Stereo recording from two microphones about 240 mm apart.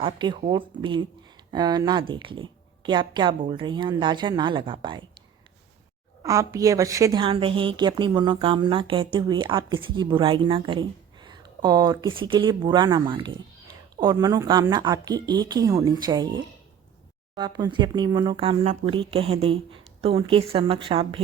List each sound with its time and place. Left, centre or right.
0.0 s a woman's voice: centre
6.2 s a woman's voice: centre